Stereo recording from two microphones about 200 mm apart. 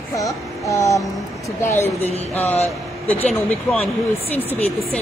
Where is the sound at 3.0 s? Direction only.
5° left (ahead or behind).